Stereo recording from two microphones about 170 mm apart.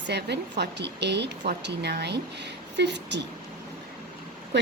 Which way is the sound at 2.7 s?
90° right.